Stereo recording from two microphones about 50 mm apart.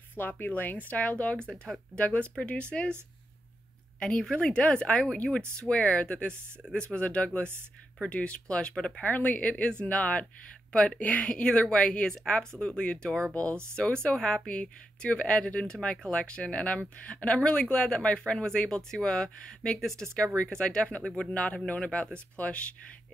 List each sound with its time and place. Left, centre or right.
0.1 s a woman's voice: left
4.0 s a woman's voice: centre
9.0 s a woman's voice: left
11.2 s a woman's voice: left
13.3 s a woman's voice: left